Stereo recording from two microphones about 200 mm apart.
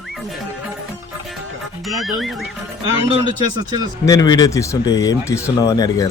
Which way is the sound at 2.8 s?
25° right (ahead or behind).